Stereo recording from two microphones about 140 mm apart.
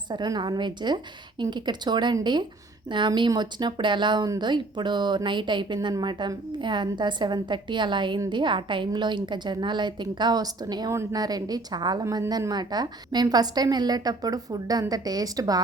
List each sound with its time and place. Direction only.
0.1 s a woman's voice: 30° right (ahead or behind)